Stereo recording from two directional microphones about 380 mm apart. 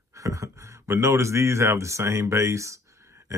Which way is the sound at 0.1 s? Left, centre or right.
Centre.